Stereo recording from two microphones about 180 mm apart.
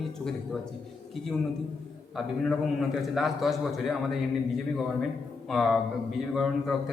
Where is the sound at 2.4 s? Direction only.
Centre (ahead or behind).